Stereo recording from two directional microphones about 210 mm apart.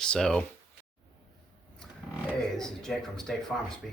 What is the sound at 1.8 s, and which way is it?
Speech, centre (ahead or behind).